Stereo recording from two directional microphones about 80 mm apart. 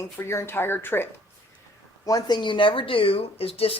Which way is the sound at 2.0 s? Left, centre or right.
Left.